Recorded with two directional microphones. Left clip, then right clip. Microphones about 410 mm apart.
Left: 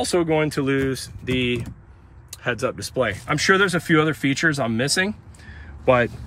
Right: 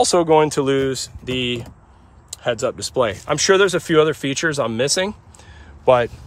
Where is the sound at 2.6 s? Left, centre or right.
Centre.